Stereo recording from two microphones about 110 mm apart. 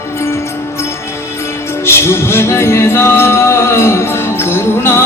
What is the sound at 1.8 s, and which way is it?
Music, 25° left (ahead or behind).